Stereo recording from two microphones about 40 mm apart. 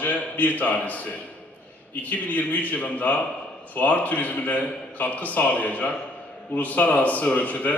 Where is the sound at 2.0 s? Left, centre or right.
Left.